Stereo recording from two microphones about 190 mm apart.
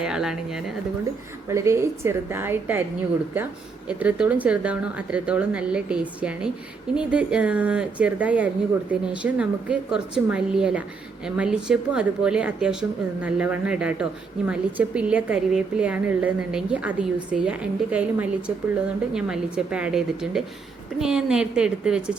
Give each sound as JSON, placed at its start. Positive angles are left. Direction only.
{"t": 0.0, "sound": "a woman's voice", "side_deg": -5}
{"t": 1.5, "sound": "a woman's voice", "side_deg": -15}
{"t": 3.8, "sound": "a woman's voice", "side_deg": -5}